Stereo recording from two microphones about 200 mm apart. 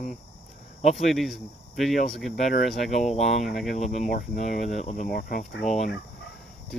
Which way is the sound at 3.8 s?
35° left (ahead or behind).